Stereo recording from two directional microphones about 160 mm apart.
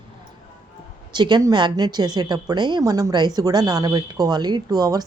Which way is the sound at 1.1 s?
25° right (ahead or behind).